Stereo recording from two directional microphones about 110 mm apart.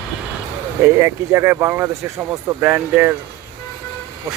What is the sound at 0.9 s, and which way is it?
Speech, 25° right (ahead or behind).